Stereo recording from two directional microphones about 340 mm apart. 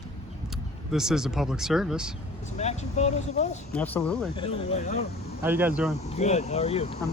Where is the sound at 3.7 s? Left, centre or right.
Centre.